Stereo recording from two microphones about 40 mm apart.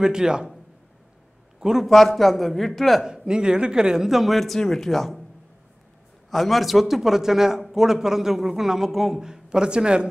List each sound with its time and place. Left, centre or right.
0.0 s a man's voice: centre
1.6 s a man's voice: centre
1.9 s a man's voice: centre
3.1 s a man's voice: centre
4.4 s a man's voice: centre
6.3 s a man's voice: centre; by 10.0 s right